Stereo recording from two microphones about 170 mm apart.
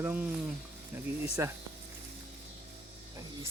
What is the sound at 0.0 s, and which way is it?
Speech, 10° right (ahead or behind).